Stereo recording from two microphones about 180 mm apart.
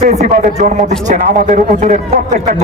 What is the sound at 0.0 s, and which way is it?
A man's voice, 40° right (ahead or behind).